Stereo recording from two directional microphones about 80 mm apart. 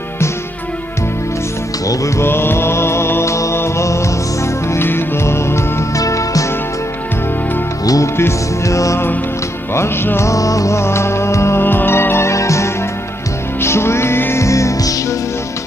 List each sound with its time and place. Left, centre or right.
1.9 s mantra: left
4.7 s music: left
5.9 s music: left
7.8 s music: left